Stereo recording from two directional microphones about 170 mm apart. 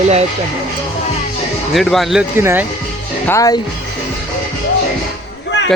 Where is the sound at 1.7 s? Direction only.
Centre (ahead or behind).